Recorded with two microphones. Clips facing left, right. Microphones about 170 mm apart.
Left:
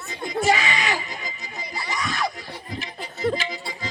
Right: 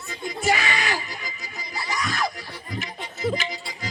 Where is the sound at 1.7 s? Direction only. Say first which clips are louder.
Even; 20° left (ahead or behind).